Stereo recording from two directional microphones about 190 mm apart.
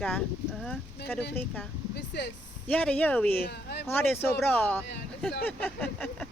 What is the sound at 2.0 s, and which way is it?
Speech, 60° left (ahead or behind).